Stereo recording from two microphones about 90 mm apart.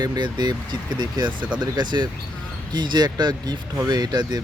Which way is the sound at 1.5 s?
55° right (ahead or behind).